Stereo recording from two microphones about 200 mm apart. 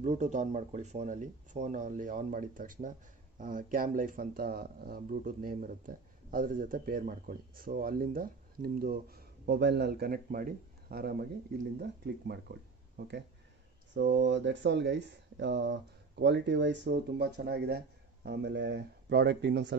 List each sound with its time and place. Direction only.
0.0 s speech: 35° right (ahead or behind); by 19.7 s 60° right (ahead or behind)